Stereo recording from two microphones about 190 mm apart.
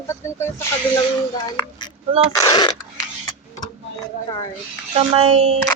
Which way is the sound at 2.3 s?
20° left (ahead or behind).